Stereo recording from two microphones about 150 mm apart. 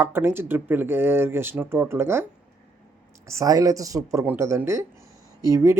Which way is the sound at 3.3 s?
20° right (ahead or behind).